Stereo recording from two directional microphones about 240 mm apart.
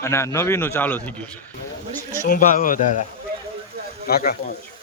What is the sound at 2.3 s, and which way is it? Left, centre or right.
Speech, left.